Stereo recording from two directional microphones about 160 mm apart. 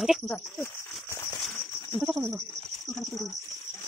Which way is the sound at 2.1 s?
15° right (ahead or behind).